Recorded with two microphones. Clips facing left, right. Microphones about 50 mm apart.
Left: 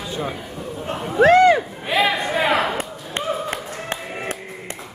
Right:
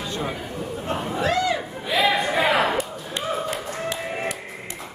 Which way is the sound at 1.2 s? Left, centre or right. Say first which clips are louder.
Left 11 dB; left.